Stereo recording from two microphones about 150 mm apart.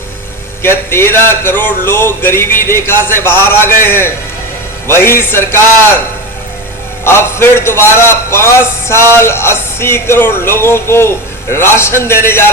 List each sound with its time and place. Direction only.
0.6 s a man's voice: 15° left (ahead or behind)
7.0 s a man's voice: 15° left (ahead or behind)